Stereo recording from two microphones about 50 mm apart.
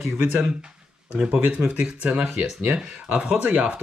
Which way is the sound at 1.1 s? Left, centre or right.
Right.